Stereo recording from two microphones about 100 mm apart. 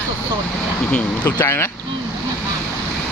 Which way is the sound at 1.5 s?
25° left (ahead or behind).